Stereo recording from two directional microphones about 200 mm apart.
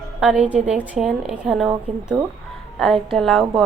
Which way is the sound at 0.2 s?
5° right (ahead or behind).